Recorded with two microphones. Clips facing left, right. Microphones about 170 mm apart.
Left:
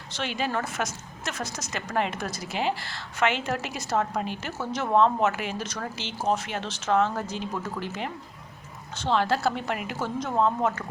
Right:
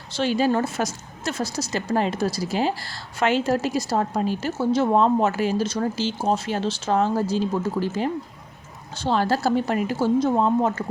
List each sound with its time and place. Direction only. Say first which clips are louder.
0.2 s a woman's voice: right 8 dB; 35° right (ahead or behind)